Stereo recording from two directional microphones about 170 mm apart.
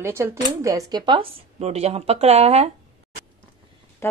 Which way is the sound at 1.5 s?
40° right (ahead or behind).